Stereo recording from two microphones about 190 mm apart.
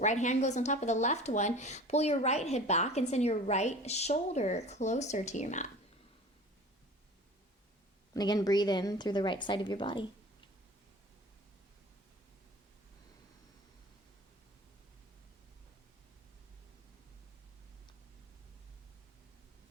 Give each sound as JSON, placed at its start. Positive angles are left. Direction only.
{"t": 0.0, "sound": "speech", "side_deg": 40}
{"t": 8.1, "sound": "a woman's voice", "side_deg": 20}